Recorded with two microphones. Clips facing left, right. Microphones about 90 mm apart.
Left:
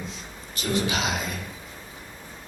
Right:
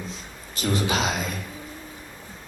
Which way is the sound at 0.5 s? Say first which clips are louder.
Right 2 dB; 40° right (ahead or behind).